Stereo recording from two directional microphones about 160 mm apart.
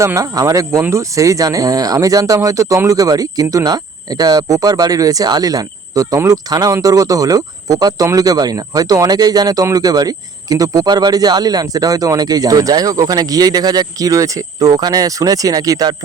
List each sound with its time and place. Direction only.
0.0 s speech: 20° right (ahead or behind)